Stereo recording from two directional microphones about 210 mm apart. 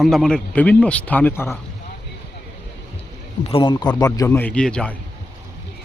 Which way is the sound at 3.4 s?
25° left (ahead or behind).